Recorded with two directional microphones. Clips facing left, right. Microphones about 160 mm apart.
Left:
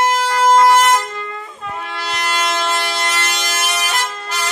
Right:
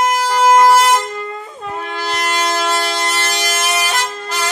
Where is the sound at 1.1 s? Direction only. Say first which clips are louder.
Right 3 dB; 30° right (ahead or behind).